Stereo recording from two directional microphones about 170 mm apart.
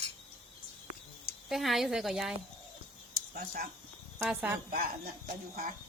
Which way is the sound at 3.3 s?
60° right (ahead or behind).